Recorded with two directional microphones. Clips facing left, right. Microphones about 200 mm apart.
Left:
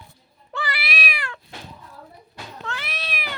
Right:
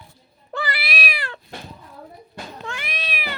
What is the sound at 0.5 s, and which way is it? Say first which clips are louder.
Cat: right 2 dB; 35° right (ahead or behind).